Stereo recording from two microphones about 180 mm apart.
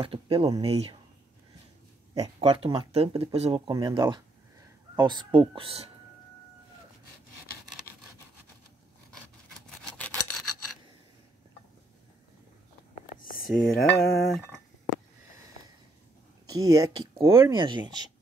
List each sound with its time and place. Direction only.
0.0 s speech: 30° right (ahead or behind)
2.2 s speech: 30° right (ahead or behind)
3.7 s speech: 20° right (ahead or behind)
9.8 s filing: 5° left (ahead or behind)
13.2 s a sound: 50° left (ahead or behind)
13.7 s cutlery: centre (ahead or behind)
16.4 s speech: 20° right (ahead or behind)